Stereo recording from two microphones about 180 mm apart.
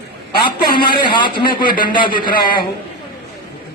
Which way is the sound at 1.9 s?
25° left (ahead or behind).